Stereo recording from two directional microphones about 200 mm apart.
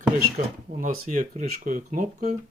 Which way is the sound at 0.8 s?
40° right (ahead or behind).